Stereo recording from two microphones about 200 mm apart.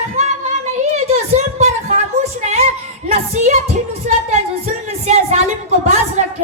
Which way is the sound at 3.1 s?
35° right (ahead or behind).